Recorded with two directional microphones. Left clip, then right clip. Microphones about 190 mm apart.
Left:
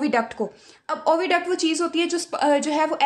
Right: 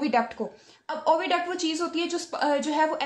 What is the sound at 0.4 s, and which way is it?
A woman's voice, 45° left (ahead or behind).